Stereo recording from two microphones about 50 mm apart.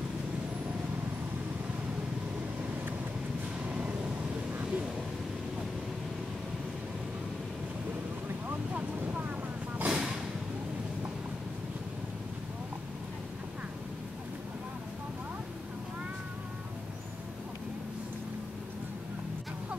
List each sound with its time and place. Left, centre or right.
3.6 s vehicle: right
8.5 s vehicle: right
9.8 s a sound: right